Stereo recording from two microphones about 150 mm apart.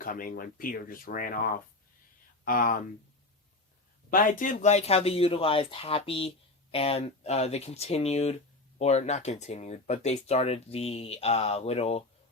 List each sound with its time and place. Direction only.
0.0 s speech: 70° left (ahead or behind)
4.1 s speech: 65° left (ahead or behind); by 12.0 s 45° left (ahead or behind)